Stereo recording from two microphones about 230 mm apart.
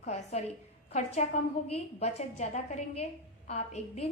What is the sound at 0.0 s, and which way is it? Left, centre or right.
A woman's voice, left.